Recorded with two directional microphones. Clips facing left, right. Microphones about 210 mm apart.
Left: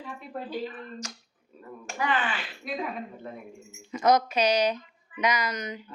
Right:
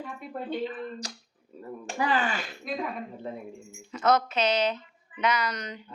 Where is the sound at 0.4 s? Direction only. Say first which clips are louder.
Right 4 dB; 30° right (ahead or behind).